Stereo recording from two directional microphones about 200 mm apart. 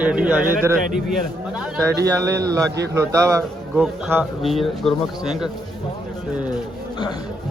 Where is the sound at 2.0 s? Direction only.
15° right (ahead or behind).